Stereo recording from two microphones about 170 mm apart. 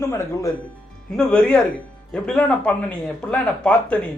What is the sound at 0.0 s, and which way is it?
A man's voice, 15° left (ahead or behind).